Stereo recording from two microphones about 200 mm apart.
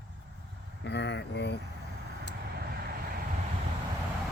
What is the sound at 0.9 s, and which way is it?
Speech, 60° left (ahead or behind).